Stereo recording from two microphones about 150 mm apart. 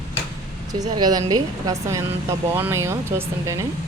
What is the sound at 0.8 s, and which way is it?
Speech, 25° right (ahead or behind).